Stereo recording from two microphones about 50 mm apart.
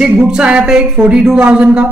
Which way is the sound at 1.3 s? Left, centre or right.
Right.